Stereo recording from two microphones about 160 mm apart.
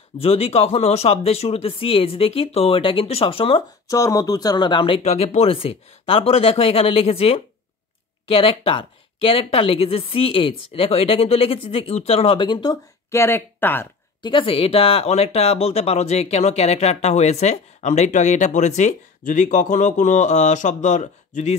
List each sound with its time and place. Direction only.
0.2 s speech: 40° left (ahead or behind)
3.8 s speech: 20° left (ahead or behind)
13.1 s speech: 15° left (ahead or behind)
14.2 s speech: 30° left (ahead or behind); by 21.5 s 50° left (ahead or behind)